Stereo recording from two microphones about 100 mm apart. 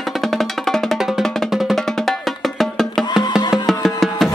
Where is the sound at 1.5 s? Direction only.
Centre (ahead or behind).